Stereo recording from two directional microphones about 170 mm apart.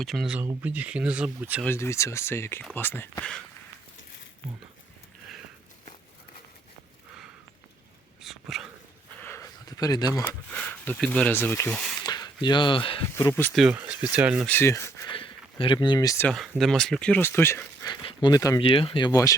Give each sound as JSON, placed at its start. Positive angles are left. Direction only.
{"t": 0.0, "sound": "speech", "side_deg": 0}
{"t": 1.6, "sound": "speech", "side_deg": 15}
{"t": 8.2, "sound": "dog", "side_deg": 0}
{"t": 9.2, "sound": "a sound", "side_deg": 15}
{"t": 10.2, "sound": "speech", "side_deg": 10}
{"t": 12.0, "sound": "speech", "side_deg": 25}
{"t": 13.1, "sound": "speech", "side_deg": 15}
{"t": 13.6, "sound": "speech", "side_deg": -5}
{"t": 14.4, "sound": "speech", "side_deg": 15}
{"t": 15.1, "sound": "a sound", "side_deg": 30}
{"t": 16.2, "sound": "speech", "side_deg": 0}
{"t": 18.6, "sound": "speech", "side_deg": 30}